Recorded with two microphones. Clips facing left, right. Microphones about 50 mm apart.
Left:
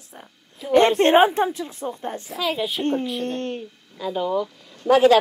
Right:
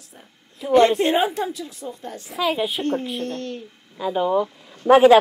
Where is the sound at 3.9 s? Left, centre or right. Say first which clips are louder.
Right 3 dB; centre.